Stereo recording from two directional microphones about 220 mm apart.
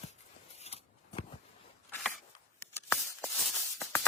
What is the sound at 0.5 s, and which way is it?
Scissors, 30° left (ahead or behind).